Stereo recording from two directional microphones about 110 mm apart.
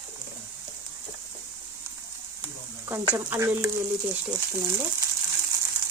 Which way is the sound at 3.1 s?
25° right (ahead or behind).